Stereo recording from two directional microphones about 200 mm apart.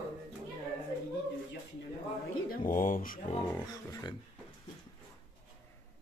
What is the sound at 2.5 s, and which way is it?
Speech, 45° left (ahead or behind).